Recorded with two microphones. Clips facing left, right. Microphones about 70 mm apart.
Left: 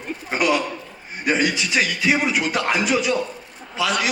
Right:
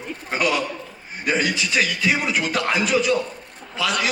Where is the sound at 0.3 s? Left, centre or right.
Centre.